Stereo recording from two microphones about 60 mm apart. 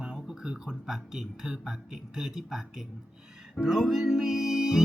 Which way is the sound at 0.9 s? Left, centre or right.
Centre.